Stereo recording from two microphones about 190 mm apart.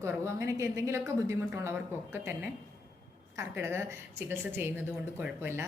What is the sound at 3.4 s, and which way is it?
A woman's voice, 15° right (ahead or behind).